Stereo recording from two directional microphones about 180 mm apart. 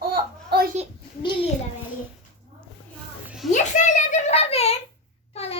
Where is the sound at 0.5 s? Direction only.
65° right (ahead or behind).